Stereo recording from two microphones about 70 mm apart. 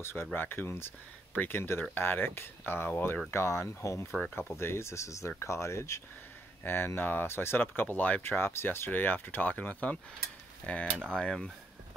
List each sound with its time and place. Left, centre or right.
0.0 s speech: left
4.4 s speech: left
6.6 s speech: left; by 11.3 s centre